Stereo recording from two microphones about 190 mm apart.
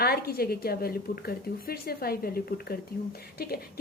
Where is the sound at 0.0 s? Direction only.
55° left (ahead or behind).